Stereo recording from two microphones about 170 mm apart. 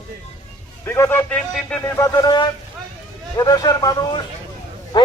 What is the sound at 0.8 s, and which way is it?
A man's voice, 15° left (ahead or behind).